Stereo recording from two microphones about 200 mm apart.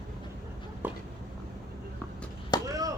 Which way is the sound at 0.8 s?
10° right (ahead or behind).